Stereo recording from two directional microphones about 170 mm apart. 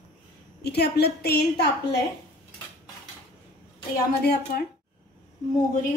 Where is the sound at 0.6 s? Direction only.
70° left (ahead or behind).